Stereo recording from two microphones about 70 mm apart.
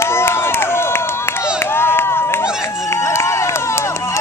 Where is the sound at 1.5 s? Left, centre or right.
Left.